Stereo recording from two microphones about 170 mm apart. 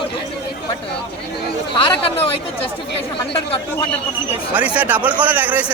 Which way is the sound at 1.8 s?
35° left (ahead or behind).